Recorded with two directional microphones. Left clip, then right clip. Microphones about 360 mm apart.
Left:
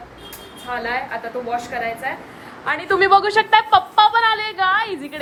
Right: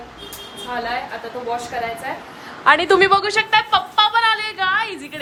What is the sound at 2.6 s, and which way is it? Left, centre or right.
Speech, right.